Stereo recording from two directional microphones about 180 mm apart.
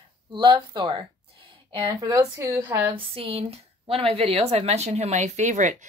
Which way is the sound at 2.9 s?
30° right (ahead or behind).